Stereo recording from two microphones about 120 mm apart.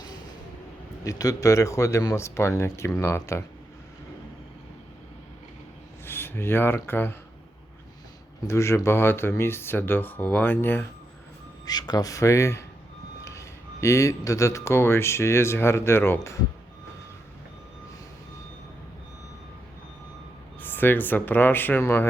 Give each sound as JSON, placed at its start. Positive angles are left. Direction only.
{"t": 1.0, "sound": "speech", "side_deg": 30}
{"t": 6.1, "sound": "speech", "side_deg": 20}
{"t": 8.4, "sound": "speech", "side_deg": 20}
{"t": 11.6, "sound": "speech", "side_deg": 35}
{"t": 20.6, "sound": "speech", "side_deg": 15}